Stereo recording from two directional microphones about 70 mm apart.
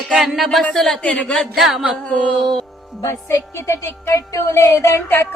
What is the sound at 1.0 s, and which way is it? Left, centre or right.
Speech, centre.